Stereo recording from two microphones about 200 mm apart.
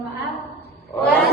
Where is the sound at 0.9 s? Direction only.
15° left (ahead or behind).